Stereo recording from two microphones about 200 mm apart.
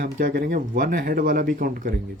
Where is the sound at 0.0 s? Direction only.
45° right (ahead or behind).